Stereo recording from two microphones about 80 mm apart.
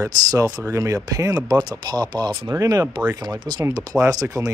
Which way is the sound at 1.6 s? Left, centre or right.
Right.